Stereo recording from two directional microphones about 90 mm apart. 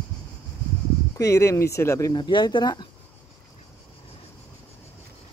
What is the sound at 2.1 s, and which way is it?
Speech, 60° left (ahead or behind).